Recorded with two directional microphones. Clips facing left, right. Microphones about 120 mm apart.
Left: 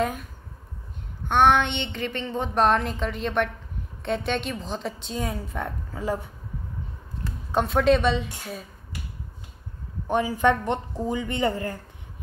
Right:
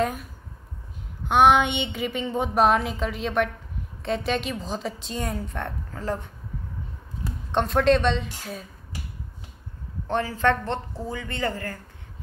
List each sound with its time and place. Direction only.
0.0 s a woman's voice: centre (ahead or behind)
1.3 s a woman's voice: 10° right (ahead or behind)
10.0 s speech: 15° left (ahead or behind)